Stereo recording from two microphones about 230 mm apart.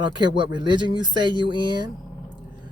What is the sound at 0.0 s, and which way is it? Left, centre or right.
Speech, centre.